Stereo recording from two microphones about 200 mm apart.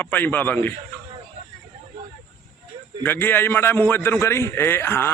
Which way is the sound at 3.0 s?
10° left (ahead or behind).